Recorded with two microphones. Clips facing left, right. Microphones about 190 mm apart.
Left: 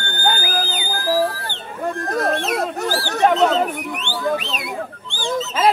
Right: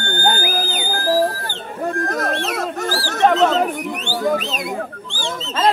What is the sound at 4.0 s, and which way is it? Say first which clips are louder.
Music: right 2 dB; 40° right (ahead or behind).